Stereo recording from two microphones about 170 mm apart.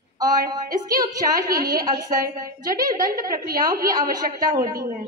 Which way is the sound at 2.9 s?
55° right (ahead or behind).